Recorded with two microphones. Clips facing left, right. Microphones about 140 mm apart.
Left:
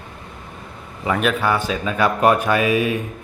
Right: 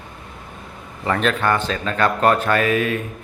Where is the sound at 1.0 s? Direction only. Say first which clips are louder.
Even; 5° left (ahead or behind).